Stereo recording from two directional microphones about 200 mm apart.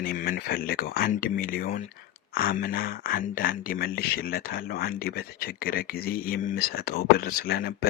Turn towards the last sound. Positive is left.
turn(degrees=50)  # may be behind; listen again after turning